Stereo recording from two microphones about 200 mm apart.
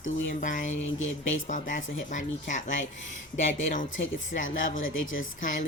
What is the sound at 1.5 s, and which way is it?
Speech, 40° left (ahead or behind).